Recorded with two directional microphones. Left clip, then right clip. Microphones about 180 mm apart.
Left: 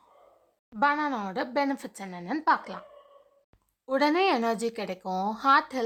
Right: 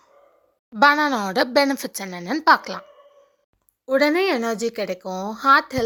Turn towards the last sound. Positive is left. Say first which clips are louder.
# right 6 dB
turn(degrees=-20)  # may be behind; listen again after turning